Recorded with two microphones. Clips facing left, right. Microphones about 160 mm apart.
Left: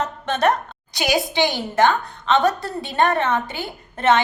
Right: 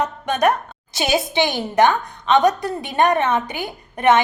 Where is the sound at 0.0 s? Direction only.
10° right (ahead or behind).